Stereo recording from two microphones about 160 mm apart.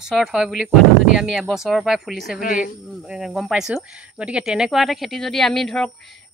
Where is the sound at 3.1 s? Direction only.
Centre (ahead or behind).